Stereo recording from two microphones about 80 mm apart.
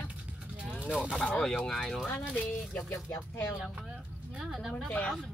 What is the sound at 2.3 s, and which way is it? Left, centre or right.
Speech, left.